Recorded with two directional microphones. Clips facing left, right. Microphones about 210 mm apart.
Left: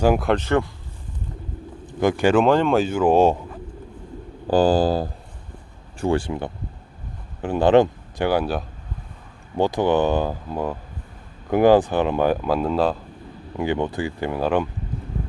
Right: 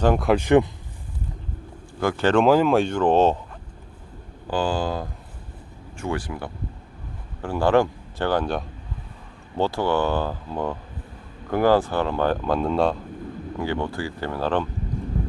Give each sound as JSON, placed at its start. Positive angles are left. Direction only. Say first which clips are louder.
{"t": 0.0, "sound": "speech", "louder": "left 2 dB", "side_deg": 10}
{"t": 0.3, "sound": "speech", "louder": "right 3 dB", "side_deg": -15}
{"t": 1.9, "sound": "speech", "louder": "left 3 dB", "side_deg": 20}
{"t": 2.4, "sound": "speech", "louder": "even", "side_deg": -5}
{"t": 4.4, "sound": "speech", "louder": "left 7 dB", "side_deg": 40}
{"t": 13.6, "sound": "speech", "louder": "left 4 dB", "side_deg": 20}